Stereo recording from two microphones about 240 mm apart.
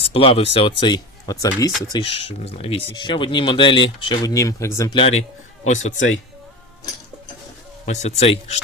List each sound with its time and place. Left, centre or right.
0.0 s speech: left
4.9 s speech: left
7.9 s speech: left